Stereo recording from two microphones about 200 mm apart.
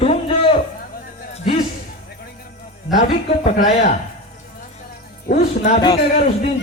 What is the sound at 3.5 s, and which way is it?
Speech, 40° left (ahead or behind).